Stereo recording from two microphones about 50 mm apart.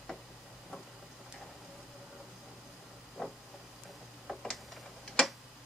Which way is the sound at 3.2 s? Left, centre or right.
Centre.